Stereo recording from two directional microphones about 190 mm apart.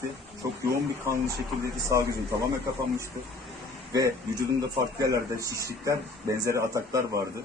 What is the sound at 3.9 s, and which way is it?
Speech, 20° right (ahead or behind).